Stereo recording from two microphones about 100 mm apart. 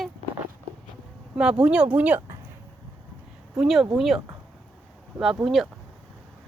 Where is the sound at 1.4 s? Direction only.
10° right (ahead or behind).